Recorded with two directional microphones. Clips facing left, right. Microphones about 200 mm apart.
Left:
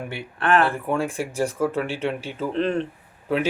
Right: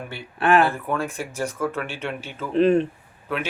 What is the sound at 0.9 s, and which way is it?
Speech, 30° left (ahead or behind).